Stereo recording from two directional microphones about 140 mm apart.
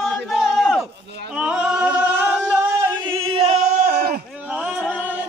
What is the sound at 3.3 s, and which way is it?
Singing, 50° right (ahead or behind).